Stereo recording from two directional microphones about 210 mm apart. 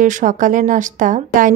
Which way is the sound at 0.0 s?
40° right (ahead or behind).